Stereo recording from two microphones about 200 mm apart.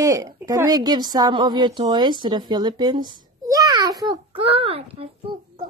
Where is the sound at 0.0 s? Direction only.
15° right (ahead or behind).